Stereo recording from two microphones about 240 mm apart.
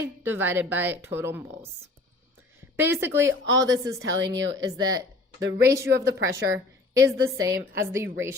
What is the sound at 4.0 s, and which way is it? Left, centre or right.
Speech, right.